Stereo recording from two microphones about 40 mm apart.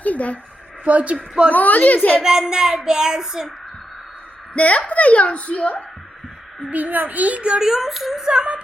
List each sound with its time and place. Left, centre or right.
0.0 s a sound: left
0.9 s a child's voice: right
1.5 s a woman's voice: left
2.2 s child singing: centre
4.5 s a woman's voice: left
6.7 s a child's voice: right
7.6 s speech: centre
8.2 s a sound: right